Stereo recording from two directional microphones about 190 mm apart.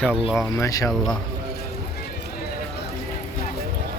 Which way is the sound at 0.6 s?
20° left (ahead or behind).